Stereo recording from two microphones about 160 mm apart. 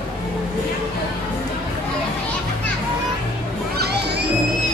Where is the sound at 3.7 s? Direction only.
90° right.